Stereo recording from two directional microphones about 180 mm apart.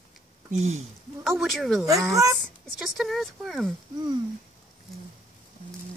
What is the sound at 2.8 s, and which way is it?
Speech, centre (ahead or behind).